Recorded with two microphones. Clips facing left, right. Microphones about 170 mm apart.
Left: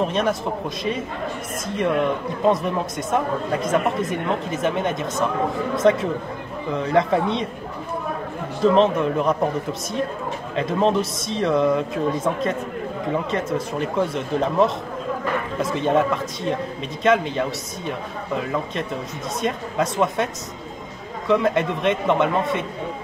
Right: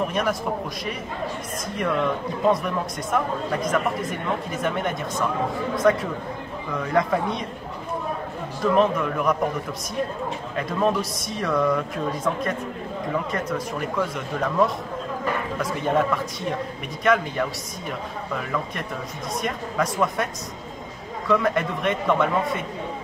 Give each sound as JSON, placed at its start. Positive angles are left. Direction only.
{"t": 0.0, "sound": "a man's voice", "side_deg": 25}
{"t": 1.8, "sound": "a man's voice", "side_deg": 20}
{"t": 8.6, "sound": "a man's voice", "side_deg": 25}
{"t": 17.0, "sound": "a man's voice", "side_deg": 20}
{"t": 19.4, "sound": "a man's voice", "side_deg": 25}
{"t": 21.3, "sound": "a man's voice", "side_deg": 20}